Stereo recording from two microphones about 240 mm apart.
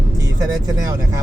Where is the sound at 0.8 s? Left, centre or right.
Centre.